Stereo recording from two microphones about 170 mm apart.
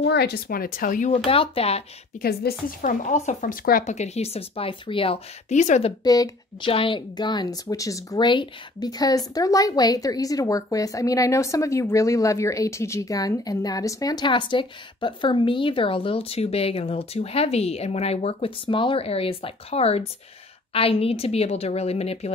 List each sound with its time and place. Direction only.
0.0 s speech: 75° left (ahead or behind); by 1.8 s 35° left (ahead or behind)
2.4 s speech: 70° left (ahead or behind)
2.8 s speech: 50° left (ahead or behind)
6.0 s speech: 20° left (ahead or behind); by 22.3 s 40° left (ahead or behind)